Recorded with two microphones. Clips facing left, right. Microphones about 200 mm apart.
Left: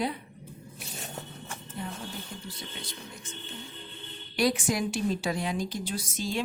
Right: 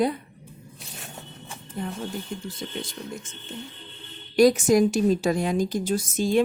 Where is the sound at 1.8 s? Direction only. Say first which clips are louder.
Right 7 dB; 50° right (ahead or behind).